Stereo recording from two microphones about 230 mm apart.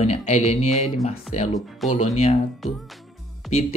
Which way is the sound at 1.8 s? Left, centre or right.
Centre.